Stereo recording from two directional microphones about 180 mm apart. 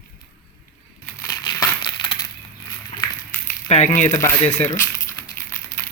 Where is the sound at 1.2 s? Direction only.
20° left (ahead or behind).